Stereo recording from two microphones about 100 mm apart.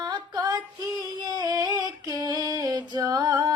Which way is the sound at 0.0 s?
40° right (ahead or behind).